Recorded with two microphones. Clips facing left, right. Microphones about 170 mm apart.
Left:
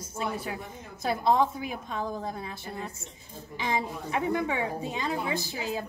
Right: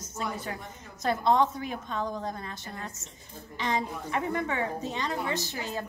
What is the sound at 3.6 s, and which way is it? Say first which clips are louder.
A woman's voice: even; 10° left (ahead or behind).